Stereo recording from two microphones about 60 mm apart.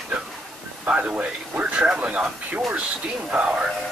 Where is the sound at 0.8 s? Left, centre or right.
Right.